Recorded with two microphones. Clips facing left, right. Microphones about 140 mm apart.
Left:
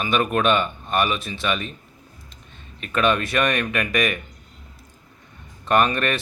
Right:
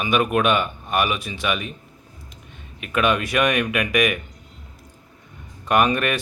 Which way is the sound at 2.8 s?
10° right (ahead or behind).